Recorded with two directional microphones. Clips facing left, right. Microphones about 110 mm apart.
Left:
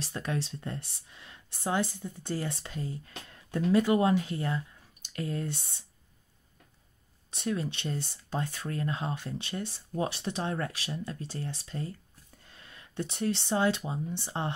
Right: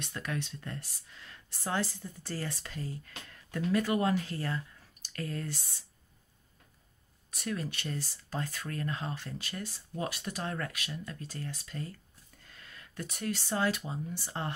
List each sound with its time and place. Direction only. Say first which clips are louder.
0.0 s speech: left 3 dB; 30° left (ahead or behind)
7.2 s speech: left 4 dB; 25° left (ahead or behind)